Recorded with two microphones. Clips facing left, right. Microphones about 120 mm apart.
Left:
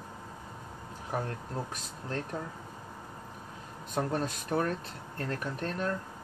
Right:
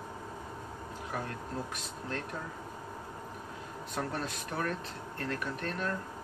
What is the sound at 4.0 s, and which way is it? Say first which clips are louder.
Speech: left 5 dB; 35° left (ahead or behind).